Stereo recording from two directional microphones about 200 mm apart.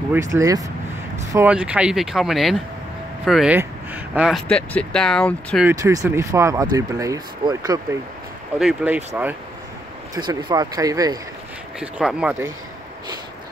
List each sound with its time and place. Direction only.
0.1 s speech: 15° right (ahead or behind)
4.5 s speech: 5° left (ahead or behind)
5.7 s speech: 15° right (ahead or behind)
8.5 s speech: 5° right (ahead or behind)
10.1 s speech: 20° right (ahead or behind)
11.8 s speech: 5° right (ahead or behind)